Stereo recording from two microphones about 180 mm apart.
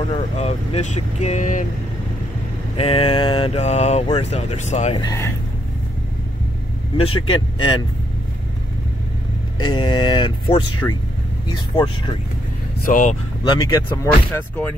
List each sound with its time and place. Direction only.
0.4 s speech: 40° left (ahead or behind)
2.8 s speech: 30° left (ahead or behind)
4.9 s speech: 20° left (ahead or behind)
7.0 s speech: 30° left (ahead or behind)
9.6 s speech: 25° left (ahead or behind)
12.7 s speech: 50° left (ahead or behind)
13.5 s speech: 20° left (ahead or behind)